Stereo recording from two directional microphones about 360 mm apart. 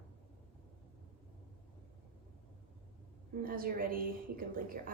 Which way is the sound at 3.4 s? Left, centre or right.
Right.